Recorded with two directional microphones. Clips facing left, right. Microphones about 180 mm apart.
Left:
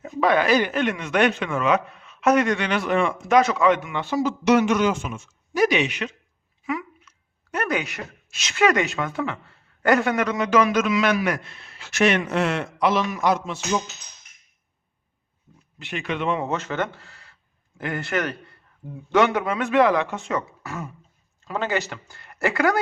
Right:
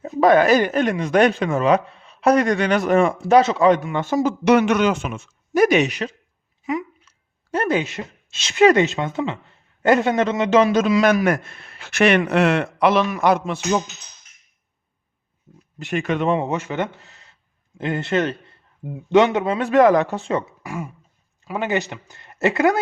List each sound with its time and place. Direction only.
0.0 s speech: 40° right (ahead or behind)
3.2 s a man's voice: 30° right (ahead or behind)
6.7 s a sound: 20° right (ahead or behind)
7.5 s speech: 30° right (ahead or behind); by 13.6 s 60° right (ahead or behind)
15.8 s a man's voice: 45° right (ahead or behind)
16.4 s a man's voice: 15° right (ahead or behind); by 20.5 s 30° right (ahead or behind)
20.6 s speech: 10° right (ahead or behind)